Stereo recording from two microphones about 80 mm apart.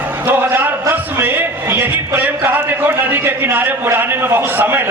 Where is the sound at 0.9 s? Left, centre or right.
Right.